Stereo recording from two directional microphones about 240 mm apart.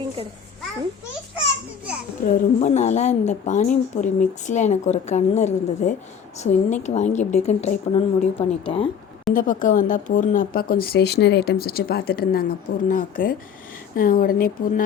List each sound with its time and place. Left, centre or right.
2.6 s speech: left
9.3 s speech: left